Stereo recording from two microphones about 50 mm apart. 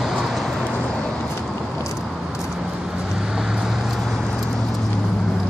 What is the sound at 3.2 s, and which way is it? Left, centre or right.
Vehicle, centre.